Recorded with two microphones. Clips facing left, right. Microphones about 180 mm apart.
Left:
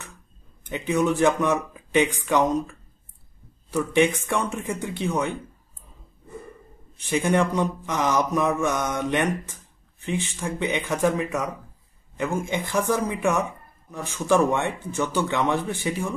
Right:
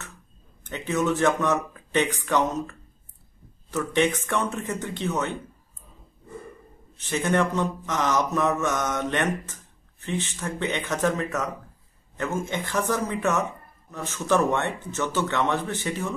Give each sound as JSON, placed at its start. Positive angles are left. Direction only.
{"t": 0.7, "sound": "speech", "side_deg": 15}
{"t": 3.7, "sound": "speech", "side_deg": 10}
{"t": 7.0, "sound": "speech", "side_deg": 10}